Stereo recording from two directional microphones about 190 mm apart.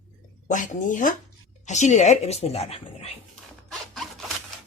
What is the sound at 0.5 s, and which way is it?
Speech, 40° left (ahead or behind).